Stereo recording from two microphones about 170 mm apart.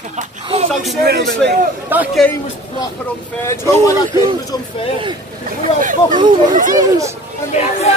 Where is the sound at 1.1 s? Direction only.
85° right.